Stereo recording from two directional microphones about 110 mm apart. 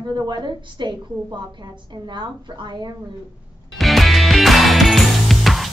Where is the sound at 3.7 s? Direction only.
Centre (ahead or behind).